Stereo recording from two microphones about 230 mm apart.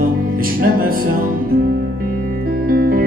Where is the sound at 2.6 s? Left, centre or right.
Right.